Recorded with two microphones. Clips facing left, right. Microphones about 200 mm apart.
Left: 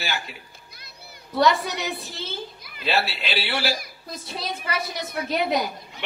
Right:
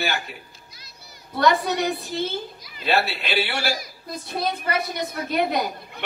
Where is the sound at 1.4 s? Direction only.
55° right (ahead or behind).